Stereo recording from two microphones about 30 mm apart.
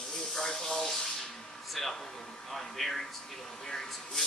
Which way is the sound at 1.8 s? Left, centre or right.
Centre.